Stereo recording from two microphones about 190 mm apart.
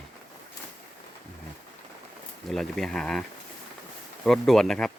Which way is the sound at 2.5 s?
Centre (ahead or behind).